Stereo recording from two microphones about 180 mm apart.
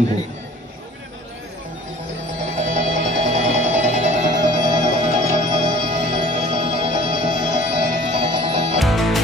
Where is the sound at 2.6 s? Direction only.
40° right (ahead or behind).